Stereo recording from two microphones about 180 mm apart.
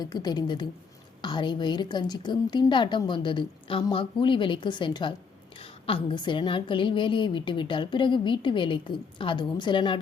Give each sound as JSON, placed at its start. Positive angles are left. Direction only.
{"t": 0.0, "sound": "a woman's voice", "side_deg": 20}